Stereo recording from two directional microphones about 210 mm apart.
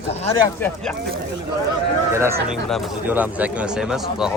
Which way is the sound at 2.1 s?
15° right (ahead or behind).